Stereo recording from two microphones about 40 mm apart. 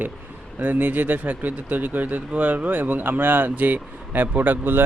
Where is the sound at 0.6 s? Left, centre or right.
Right.